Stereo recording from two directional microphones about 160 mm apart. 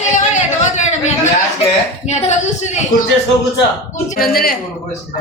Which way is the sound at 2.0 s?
45° left (ahead or behind).